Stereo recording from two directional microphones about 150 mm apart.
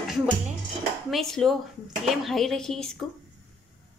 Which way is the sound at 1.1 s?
5° left (ahead or behind).